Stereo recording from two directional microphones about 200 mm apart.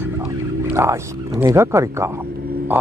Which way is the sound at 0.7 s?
15° right (ahead or behind).